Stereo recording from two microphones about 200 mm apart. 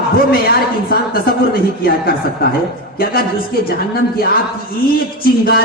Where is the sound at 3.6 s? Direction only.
50° left (ahead or behind).